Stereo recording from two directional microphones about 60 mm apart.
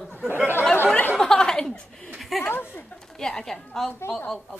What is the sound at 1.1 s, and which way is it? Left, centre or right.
Chuckle, centre.